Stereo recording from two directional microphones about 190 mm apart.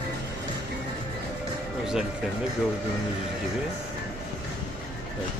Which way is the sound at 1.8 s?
5° right (ahead or behind).